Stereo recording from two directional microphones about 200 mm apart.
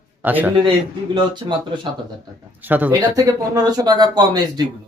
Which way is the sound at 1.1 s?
25° right (ahead or behind).